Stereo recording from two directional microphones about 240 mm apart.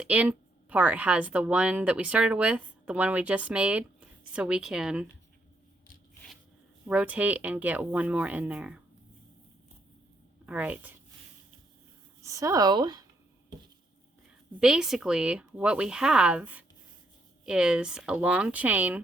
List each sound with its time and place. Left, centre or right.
0.0 s speech: centre
6.8 s speech: centre
10.4 s speech: centre
12.2 s speech: centre
14.6 s speech: centre